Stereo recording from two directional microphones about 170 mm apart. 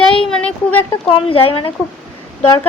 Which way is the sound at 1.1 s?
35° left (ahead or behind).